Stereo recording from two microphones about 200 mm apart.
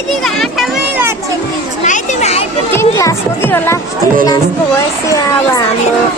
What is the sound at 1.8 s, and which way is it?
Children playing, 35° left (ahead or behind).